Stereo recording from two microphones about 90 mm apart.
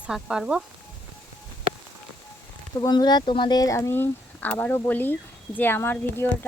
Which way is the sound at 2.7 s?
50° left (ahead or behind).